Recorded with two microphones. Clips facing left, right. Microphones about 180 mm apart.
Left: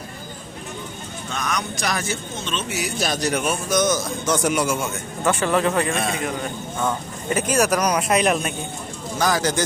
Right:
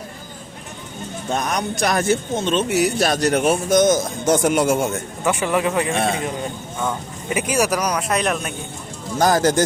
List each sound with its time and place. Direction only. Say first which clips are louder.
1.3 s speech: right 5 dB; 45° right (ahead or behind)
3.7 s a man's voice: right 3 dB; 50° right (ahead or behind)
5.2 s a man's voice: even; 15° right (ahead or behind)
6.1 s a man's voice: right 3 dB; 25° right (ahead or behind)
6.7 s speech: left 1 dB; 5° right (ahead or behind)
9.1 s a man's voice: right 5 dB; 45° right (ahead or behind)